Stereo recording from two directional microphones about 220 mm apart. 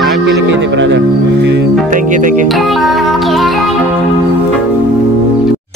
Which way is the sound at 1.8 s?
35° right (ahead or behind).